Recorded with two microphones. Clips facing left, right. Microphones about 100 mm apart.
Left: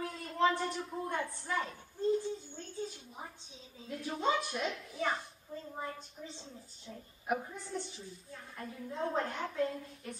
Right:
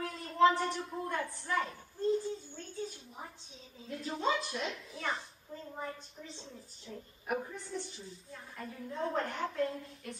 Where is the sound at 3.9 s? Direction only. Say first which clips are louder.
Left 1 dB; 5° left (ahead or behind).